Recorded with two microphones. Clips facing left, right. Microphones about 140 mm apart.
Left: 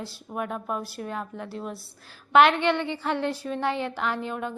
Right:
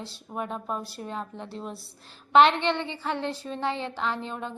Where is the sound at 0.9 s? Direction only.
25° right (ahead or behind).